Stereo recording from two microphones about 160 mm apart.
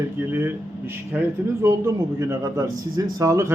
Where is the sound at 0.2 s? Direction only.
15° right (ahead or behind).